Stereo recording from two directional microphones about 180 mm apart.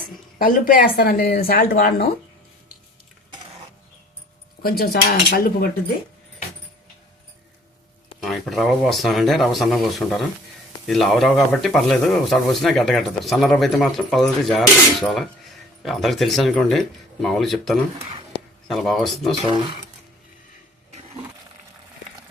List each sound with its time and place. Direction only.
0.3 s speech: 50° left (ahead or behind)
4.8 s speech: 60° left (ahead or behind)
8.2 s speech: centre (ahead or behind)